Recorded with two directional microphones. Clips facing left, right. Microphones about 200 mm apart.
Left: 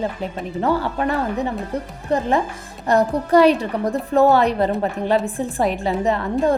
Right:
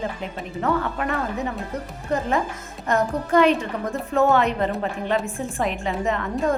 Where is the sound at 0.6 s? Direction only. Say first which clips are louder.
Left 3 dB; 30° left (ahead or behind).